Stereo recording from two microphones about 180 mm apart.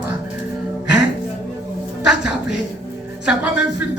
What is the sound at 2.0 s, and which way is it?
Speech, 5° right (ahead or behind).